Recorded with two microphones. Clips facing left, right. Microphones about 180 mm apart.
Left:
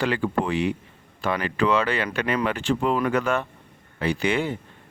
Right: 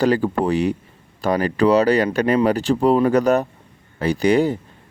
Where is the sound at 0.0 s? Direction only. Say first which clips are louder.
Right 6 dB; 40° right (ahead or behind).